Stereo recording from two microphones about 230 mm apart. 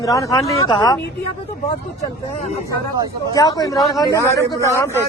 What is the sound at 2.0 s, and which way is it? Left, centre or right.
Speech, left.